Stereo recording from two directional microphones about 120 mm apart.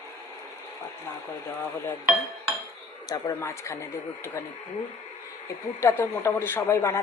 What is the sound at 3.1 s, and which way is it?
Speech, 25° left (ahead or behind).